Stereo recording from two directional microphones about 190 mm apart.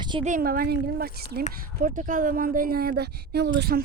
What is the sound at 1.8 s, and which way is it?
Speech, 45° right (ahead or behind).